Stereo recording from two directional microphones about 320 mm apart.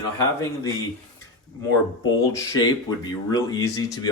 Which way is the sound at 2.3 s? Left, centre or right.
Centre.